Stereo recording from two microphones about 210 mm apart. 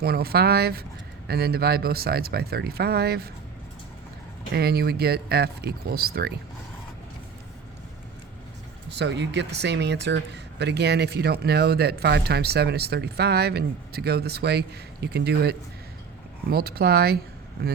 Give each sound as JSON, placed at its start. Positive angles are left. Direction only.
{"t": 0.0, "sound": "speech", "side_deg": -50}
{"t": 4.5, "sound": "speech", "side_deg": -50}
{"t": 8.9, "sound": "speech", "side_deg": -55}